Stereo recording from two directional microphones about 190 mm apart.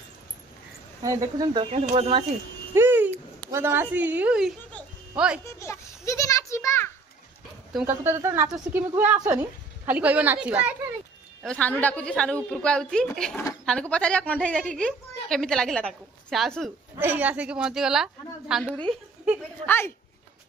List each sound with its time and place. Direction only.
1.0 s speech: 15° right (ahead or behind)
2.7 s a sound: 10° right (ahead or behind)
3.5 s a woman's voice: 10° right (ahead or behind)
5.4 s children playing: 15° left (ahead or behind)
7.8 s a woman's voice: 15° right (ahead or behind)
11.4 s a woman's voice: 5° left (ahead or behind)
19.6 s a woman's voice: 10° left (ahead or behind)